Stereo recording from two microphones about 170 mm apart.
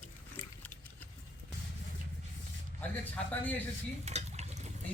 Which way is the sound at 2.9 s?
10° left (ahead or behind).